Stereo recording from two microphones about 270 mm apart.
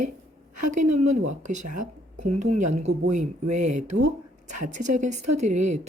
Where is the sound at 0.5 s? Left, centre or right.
Right.